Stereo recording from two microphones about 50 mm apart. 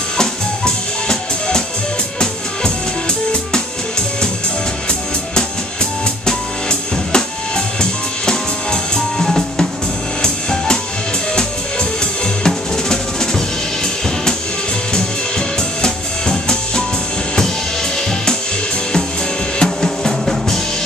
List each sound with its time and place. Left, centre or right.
0.2 s music: centre
6.2 s music: centre
12.4 s drum: centre
15.0 s music: centre
19.6 s drum: centre